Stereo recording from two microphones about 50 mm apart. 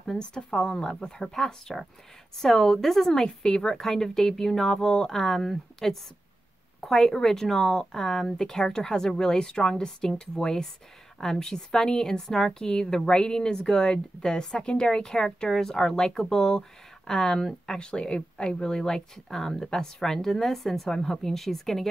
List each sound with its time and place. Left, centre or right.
0.0 s a woman's voice: centre
17.7 s a woman's voice: centre